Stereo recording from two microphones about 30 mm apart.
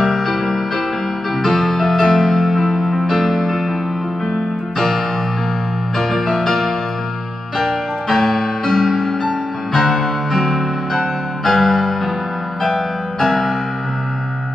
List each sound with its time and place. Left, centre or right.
1.4 s music: centre
2.1 s music: left
2.4 s music: centre
4.7 s keyboard: centre
5.9 s music: centre
13.3 s music: centre